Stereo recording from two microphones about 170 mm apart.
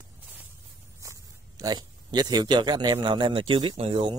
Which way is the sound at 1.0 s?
20° right (ahead or behind).